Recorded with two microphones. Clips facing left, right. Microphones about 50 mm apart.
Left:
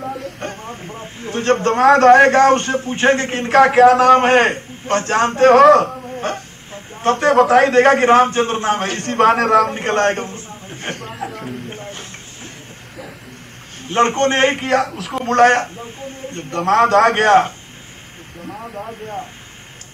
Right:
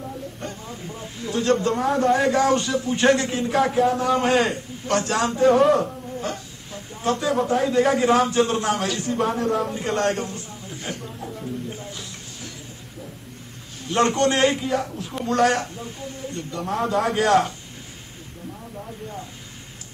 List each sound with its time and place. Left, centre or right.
0.1 s radio: left
1.9 s a man's voice: left
4.2 s a man's voice: left
5.4 s a man's voice: left
5.9 s speech: left
9.1 s a man's voice: left
9.7 s a man's voice: left
11.0 s a sound: left
11.7 s a sound: left
13.8 s a man's voice: left
14.6 s a man's voice: left
15.2 s a man's voice: left
16.4 s a man's voice: left
17.3 s a man's voice: left